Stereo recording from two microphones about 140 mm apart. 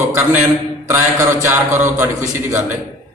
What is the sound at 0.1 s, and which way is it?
Mantra, 20° right (ahead or behind).